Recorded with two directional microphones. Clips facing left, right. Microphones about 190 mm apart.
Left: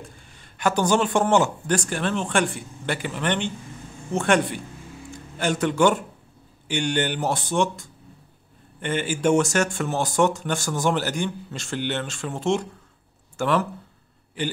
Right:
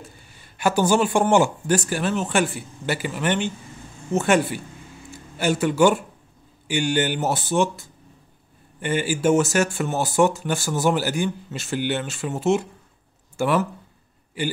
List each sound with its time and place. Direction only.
0.0 s speech: 5° right (ahead or behind)